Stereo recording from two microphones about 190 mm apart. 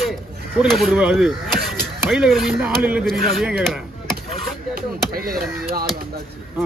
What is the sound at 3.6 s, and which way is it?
Chop, centre (ahead or behind).